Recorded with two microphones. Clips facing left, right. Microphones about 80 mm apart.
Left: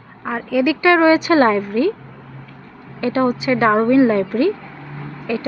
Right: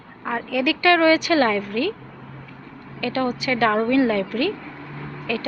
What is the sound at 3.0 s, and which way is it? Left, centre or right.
Speech, left.